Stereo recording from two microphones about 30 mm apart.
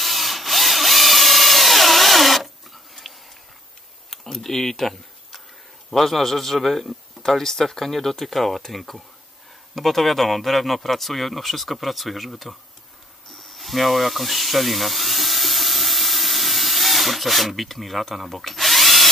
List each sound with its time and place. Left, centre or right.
0.0 s drill: centre
4.1 s tick-tock: centre
5.9 s speech: centre
7.2 s speech: centre
13.3 s a sound: centre
18.4 s drill: centre